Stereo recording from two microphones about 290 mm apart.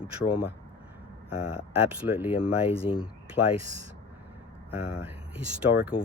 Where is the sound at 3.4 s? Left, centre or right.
Left.